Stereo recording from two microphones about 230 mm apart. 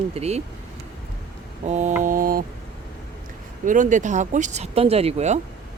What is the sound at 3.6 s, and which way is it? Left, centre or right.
Speech, right.